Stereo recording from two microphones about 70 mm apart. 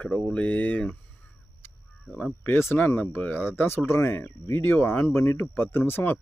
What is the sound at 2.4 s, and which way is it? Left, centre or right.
Speech, left.